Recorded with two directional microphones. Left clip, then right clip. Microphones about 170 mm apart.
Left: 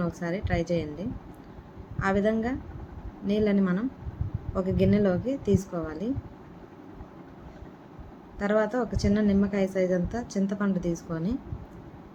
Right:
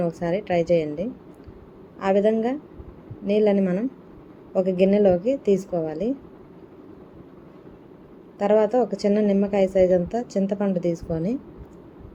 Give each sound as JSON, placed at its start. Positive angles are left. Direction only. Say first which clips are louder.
{"t": 0.0, "sound": "a woman's voice", "louder": "right 7 dB", "side_deg": -10}
{"t": 8.4, "sound": "a woman's voice", "louder": "right 7 dB", "side_deg": -5}